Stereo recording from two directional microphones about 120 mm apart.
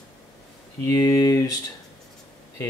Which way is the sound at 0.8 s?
30° left (ahead or behind).